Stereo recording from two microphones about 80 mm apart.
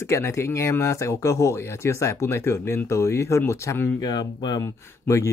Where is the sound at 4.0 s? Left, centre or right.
Left.